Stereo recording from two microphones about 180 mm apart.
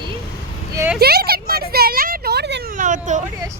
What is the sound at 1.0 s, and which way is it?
Speech, 60° right (ahead or behind).